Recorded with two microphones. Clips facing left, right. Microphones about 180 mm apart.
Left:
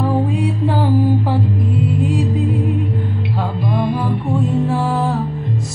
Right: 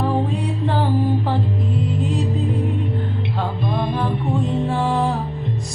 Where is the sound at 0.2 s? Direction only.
20° right (ahead or behind).